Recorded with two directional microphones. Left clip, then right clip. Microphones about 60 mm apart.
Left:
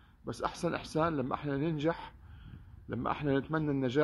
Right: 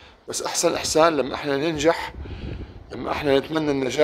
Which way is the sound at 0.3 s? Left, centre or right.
Centre.